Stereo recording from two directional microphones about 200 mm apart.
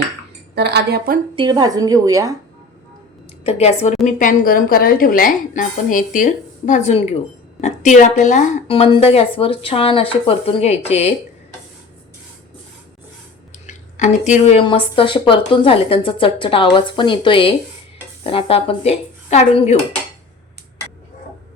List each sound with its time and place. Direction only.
0.5 s speech: 55° right (ahead or behind)
1.4 s a woman's voice: 20° right (ahead or behind)
3.4 s a woman's voice: 30° left (ahead or behind)
4.0 s a woman's voice: 40° left (ahead or behind)
13.7 s speech: 35° left (ahead or behind)